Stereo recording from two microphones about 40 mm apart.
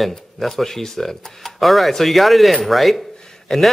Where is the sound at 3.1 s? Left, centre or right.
Centre.